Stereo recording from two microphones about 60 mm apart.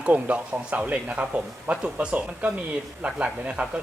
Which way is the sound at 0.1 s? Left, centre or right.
Right.